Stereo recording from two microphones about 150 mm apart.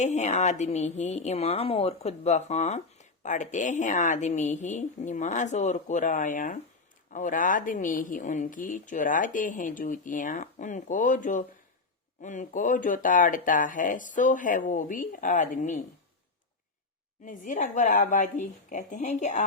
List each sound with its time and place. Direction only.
0.0 s a woman's voice: 50° left (ahead or behind)
17.2 s speech: 60° left (ahead or behind)